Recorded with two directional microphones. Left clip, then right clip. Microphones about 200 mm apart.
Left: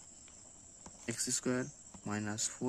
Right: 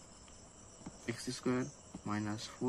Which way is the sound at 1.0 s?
55° left (ahead or behind).